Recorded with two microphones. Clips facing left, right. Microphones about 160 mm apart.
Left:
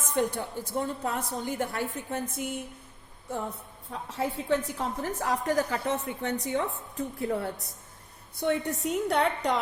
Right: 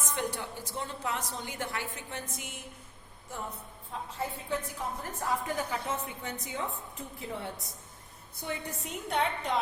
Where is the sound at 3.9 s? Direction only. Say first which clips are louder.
Left 5 dB; 80° left.